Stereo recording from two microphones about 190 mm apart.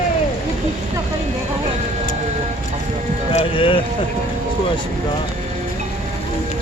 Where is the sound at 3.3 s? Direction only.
30° left (ahead or behind).